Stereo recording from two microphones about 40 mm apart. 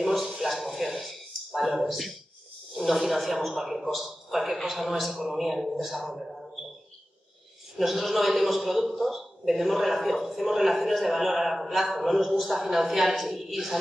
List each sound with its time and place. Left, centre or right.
0.0 s a sound: centre
2.7 s a man's voice: centre
7.7 s a man's voice: centre